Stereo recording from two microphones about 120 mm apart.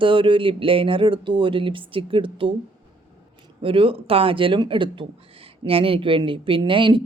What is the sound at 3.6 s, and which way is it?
Speech, 50° right (ahead or behind).